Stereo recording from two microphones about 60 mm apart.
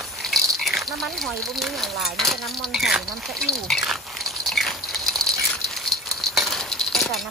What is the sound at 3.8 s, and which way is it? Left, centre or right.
Biting, centre.